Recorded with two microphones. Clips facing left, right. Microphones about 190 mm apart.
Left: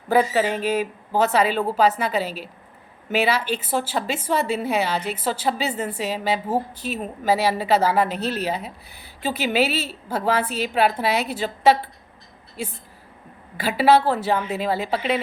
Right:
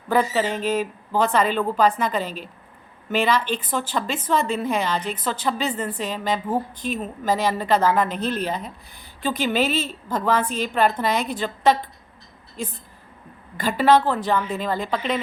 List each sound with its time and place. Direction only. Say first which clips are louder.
0.2 s speech: left 2 dB; 50° left (ahead or behind)
0.6 s a woman's voice: even; 10° left (ahead or behind)
12.6 s a woman's voice: even; 10° left (ahead or behind)